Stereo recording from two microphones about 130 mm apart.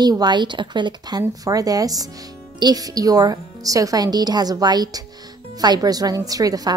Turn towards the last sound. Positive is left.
turn(degrees=-30)  # may be behind; listen again after turning